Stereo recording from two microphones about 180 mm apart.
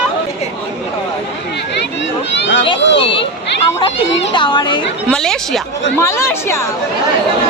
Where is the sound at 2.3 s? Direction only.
75° left (ahead or behind).